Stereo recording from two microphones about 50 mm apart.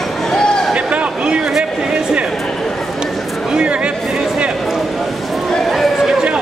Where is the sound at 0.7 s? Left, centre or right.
Right.